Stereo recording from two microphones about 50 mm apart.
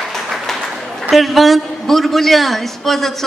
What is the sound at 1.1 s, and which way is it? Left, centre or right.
A man's voice, centre.